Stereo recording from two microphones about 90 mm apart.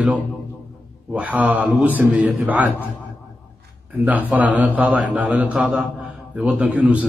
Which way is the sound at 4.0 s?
20° right (ahead or behind).